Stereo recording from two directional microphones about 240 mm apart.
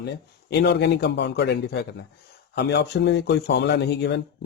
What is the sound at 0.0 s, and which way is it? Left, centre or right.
Speech, left.